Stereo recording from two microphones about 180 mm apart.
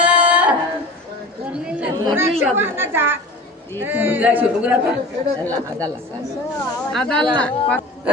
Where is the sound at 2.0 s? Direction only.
15° right (ahead or behind).